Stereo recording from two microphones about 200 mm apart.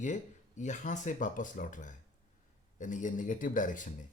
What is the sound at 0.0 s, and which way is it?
Speech, 35° left (ahead or behind).